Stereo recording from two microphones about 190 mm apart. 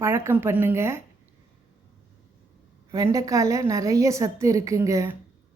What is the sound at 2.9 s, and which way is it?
A woman's voice, 15° right (ahead or behind).